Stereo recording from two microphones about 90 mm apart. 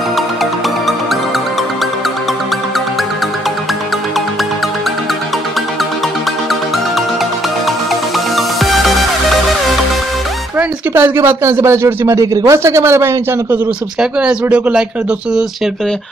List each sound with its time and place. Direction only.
8.4 s music: centre (ahead or behind)
11.0 s a man's voice: 30° right (ahead or behind)
13.9 s speech: 10° right (ahead or behind)